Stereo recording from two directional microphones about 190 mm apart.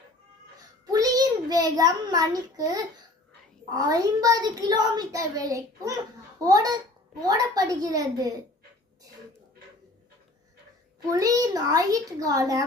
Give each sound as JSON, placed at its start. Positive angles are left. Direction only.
{"t": 0.9, "sound": "a child's voice", "side_deg": -20}
{"t": 11.1, "sound": "a child's voice", "side_deg": -20}